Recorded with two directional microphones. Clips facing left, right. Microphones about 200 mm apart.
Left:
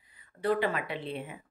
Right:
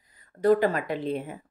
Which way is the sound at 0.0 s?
40° right (ahead or behind).